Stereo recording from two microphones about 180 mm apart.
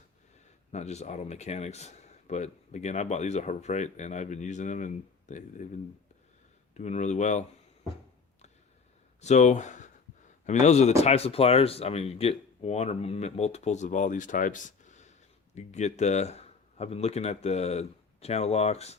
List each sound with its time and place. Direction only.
0.7 s speech: 40° left (ahead or behind)
6.7 s speech: 40° left (ahead or behind)
9.2 s speech: 40° left (ahead or behind)